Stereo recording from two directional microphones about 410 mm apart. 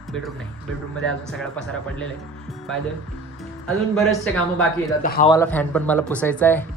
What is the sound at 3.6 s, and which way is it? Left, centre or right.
Speech, centre.